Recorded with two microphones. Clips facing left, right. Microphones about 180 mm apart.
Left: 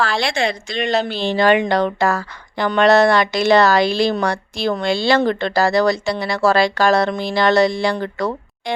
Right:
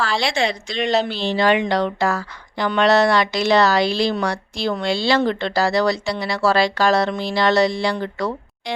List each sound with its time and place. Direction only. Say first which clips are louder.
0.0 s a woman's voice: left 1 dB; 55° left (ahead or behind)